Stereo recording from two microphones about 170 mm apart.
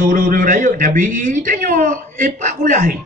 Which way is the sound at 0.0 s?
50° right (ahead or behind).